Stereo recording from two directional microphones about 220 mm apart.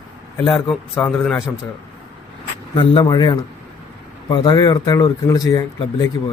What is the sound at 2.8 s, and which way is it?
Speech, 20° left (ahead or behind).